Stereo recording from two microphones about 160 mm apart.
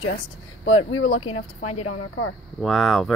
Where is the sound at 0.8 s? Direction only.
40° left (ahead or behind).